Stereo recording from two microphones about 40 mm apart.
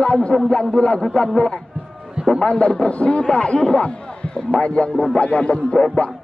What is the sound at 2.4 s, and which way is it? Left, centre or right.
A man's voice, left.